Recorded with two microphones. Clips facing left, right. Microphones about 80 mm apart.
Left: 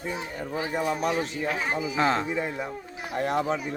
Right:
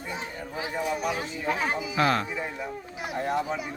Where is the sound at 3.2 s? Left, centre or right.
Left.